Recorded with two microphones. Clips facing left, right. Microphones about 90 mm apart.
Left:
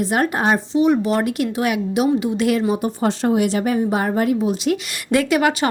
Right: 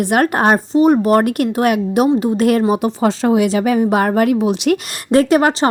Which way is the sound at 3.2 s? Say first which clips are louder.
Right 4 dB; 90° right.